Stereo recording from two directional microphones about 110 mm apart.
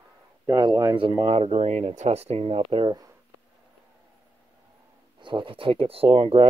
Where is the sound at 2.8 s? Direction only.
35° right (ahead or behind).